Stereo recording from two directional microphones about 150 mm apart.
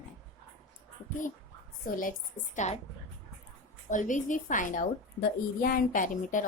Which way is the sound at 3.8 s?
60° left (ahead or behind).